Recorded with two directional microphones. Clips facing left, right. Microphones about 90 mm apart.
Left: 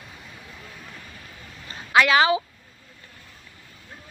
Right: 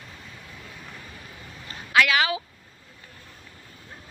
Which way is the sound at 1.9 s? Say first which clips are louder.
Left 4 dB; 30° left (ahead or behind).